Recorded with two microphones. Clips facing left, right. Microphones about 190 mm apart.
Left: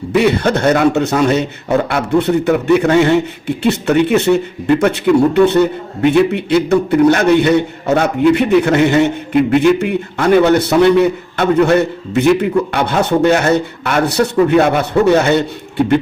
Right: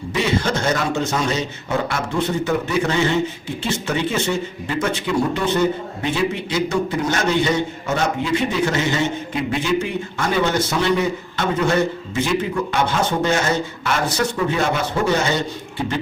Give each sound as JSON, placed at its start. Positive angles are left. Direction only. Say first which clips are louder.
{"t": 0.1, "sound": "a man's voice", "louder": "left 8 dB", "side_deg": 60}